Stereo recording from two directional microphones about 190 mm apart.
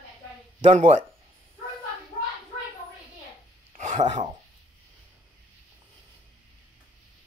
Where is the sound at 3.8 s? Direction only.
40° right (ahead or behind).